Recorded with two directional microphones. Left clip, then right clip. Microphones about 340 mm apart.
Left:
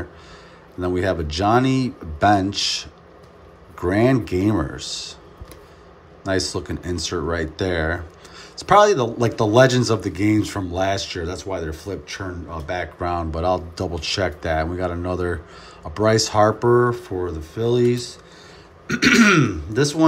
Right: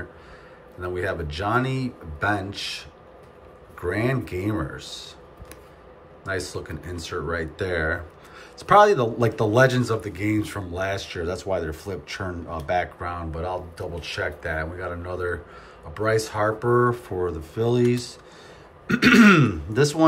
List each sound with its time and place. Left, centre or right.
0.7 s speech: centre
6.2 s speech: centre